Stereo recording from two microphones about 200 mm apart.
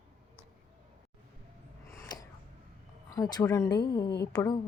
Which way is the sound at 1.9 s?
15° left (ahead or behind).